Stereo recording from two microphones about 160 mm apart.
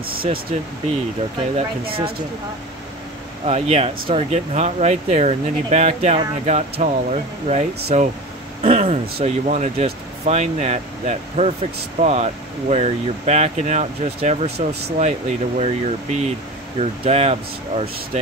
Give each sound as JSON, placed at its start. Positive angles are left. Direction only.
{"t": 0.0, "sound": "speech", "side_deg": -65}
{"t": 3.4, "sound": "speech", "side_deg": -40}